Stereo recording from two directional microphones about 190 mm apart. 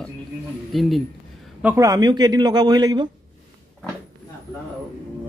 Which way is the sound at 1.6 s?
15° right (ahead or behind).